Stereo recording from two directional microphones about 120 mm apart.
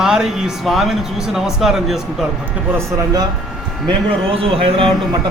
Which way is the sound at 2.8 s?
35° right (ahead or behind).